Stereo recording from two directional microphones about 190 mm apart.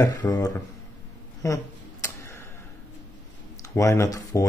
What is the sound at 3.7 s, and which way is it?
Speech, 15° left (ahead or behind).